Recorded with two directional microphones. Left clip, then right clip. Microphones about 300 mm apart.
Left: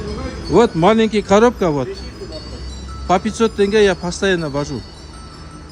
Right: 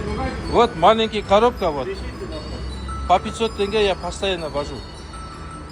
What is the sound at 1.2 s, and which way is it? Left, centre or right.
Speech, left.